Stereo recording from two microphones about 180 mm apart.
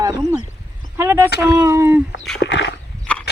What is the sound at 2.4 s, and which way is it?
Dog, 75° left (ahead or behind).